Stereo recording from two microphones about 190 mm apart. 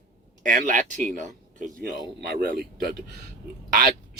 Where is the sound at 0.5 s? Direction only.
40° right (ahead or behind).